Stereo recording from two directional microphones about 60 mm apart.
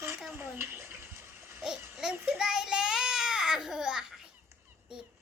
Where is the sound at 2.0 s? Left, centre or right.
Centre.